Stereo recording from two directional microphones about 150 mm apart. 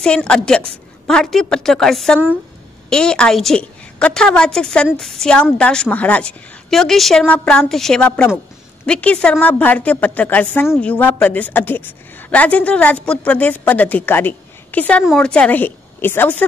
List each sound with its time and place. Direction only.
0.0 s a woman's voice: 5° left (ahead or behind)